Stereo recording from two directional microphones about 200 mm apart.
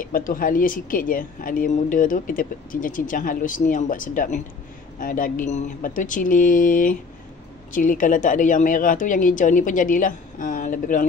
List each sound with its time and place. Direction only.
0.0 s a woman's voice: 45° left (ahead or behind)